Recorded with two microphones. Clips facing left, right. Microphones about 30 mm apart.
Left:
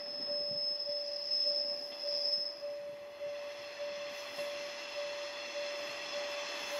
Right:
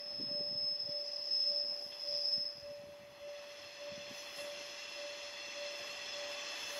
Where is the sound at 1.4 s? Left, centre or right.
Left.